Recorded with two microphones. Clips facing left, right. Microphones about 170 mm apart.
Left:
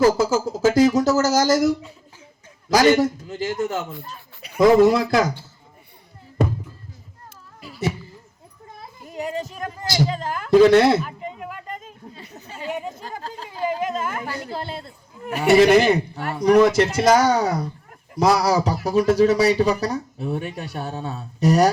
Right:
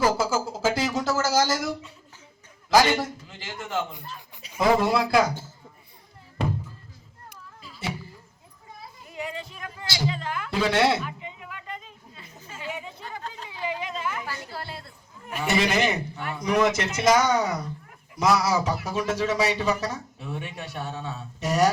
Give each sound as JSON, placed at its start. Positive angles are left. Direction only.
{"t": 0.0, "sound": "speech", "side_deg": 40}
{"t": 4.4, "sound": "a sound", "side_deg": 60}
{"t": 4.8, "sound": "speech", "side_deg": 45}
{"t": 9.0, "sound": "a sound", "side_deg": 40}
{"t": 14.5, "sound": "speech", "side_deg": 25}
{"t": 15.5, "sound": "speech", "side_deg": 35}